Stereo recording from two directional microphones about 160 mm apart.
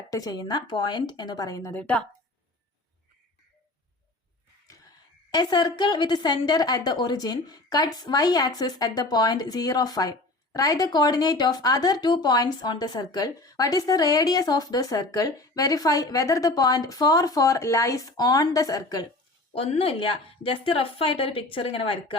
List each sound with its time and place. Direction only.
0.1 s a woman's voice: 20° left (ahead or behind)
1.8 s a woman's voice: 5° left (ahead or behind)
5.3 s a woman's voice: 25° left (ahead or behind)
19.5 s a woman's voice: 35° left (ahead or behind)